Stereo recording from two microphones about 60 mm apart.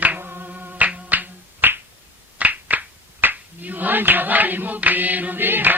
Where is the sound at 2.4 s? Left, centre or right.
Right.